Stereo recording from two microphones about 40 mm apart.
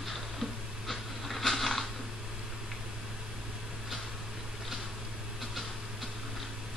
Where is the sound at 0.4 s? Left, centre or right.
Centre.